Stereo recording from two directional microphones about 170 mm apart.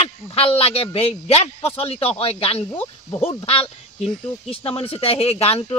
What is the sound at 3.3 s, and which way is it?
A man's voice, 30° left (ahead or behind).